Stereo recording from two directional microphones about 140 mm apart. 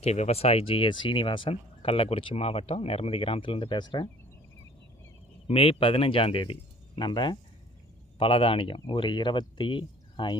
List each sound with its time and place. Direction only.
0.0 s speech: 50° left (ahead or behind); by 4.1 s 30° left (ahead or behind)
5.5 s speech: 40° left (ahead or behind)